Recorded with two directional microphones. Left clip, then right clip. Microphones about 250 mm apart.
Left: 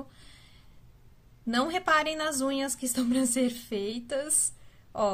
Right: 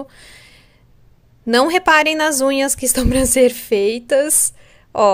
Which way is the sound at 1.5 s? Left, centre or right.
Right.